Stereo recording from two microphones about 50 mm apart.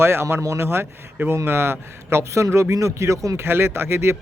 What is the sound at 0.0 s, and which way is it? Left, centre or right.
A man's voice, right.